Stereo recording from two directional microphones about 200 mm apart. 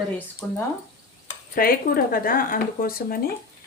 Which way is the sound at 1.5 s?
45° left (ahead or behind).